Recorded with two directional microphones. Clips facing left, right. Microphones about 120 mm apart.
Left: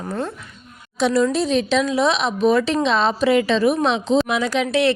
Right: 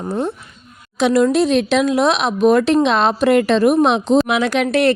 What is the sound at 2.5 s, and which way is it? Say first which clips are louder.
Speech: right 5 dB; 50° right (ahead or behind).